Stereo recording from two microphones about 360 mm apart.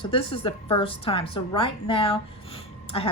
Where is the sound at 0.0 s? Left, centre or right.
Centre.